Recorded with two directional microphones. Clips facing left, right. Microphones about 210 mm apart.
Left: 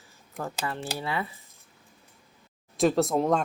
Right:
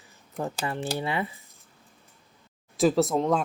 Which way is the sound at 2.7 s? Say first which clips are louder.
Right 1 dB; centre (ahead or behind).